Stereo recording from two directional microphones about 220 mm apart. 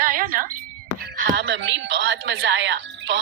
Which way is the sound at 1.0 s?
50° right (ahead or behind).